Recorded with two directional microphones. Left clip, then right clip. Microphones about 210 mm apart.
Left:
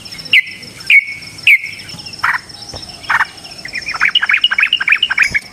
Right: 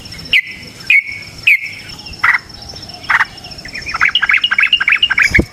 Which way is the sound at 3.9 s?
5° right (ahead or behind).